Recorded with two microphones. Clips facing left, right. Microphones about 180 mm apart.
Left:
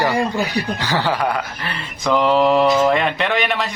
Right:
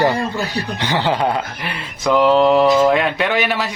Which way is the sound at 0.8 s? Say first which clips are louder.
Right 4 dB; 20° right (ahead or behind).